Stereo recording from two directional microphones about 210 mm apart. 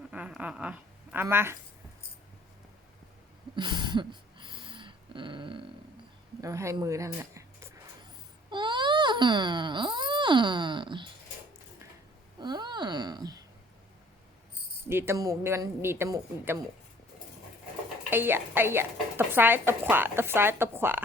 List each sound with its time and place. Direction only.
0.1 s a woman's voice: 5° right (ahead or behind)
3.5 s dog: 20° right (ahead or behind)
6.4 s speech: 15° right (ahead or behind)
8.4 s a sound: 20° right (ahead or behind)
12.4 s a sound: 20° right (ahead or behind)
14.8 s a woman's voice: 10° right (ahead or behind)
18.1 s a woman's voice: 10° right (ahead or behind)